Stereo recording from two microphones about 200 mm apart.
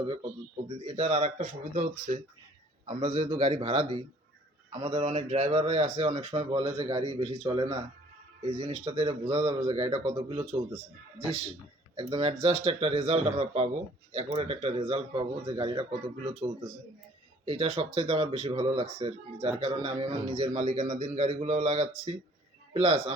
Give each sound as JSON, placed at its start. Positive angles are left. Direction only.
{"t": 0.9, "sound": "a man's voice", "side_deg": -35}
{"t": 9.2, "sound": "speech", "side_deg": -20}
{"t": 11.9, "sound": "a man's voice", "side_deg": -30}
{"t": 20.5, "sound": "a man's voice", "side_deg": -35}